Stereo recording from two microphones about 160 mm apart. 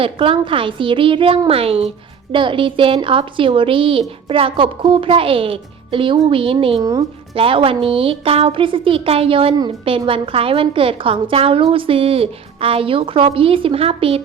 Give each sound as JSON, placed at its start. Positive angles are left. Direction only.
{"t": 0.0, "sound": "a woman's voice", "side_deg": -35}